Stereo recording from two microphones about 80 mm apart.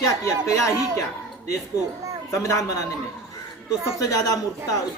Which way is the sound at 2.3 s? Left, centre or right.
Left.